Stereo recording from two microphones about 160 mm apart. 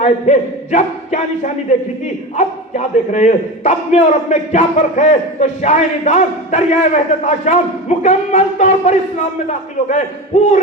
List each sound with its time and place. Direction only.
0.0 s a man's voice: 45° left (ahead or behind)